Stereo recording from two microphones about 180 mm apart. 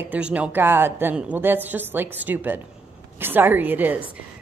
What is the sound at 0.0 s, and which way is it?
Speech, 10° right (ahead or behind).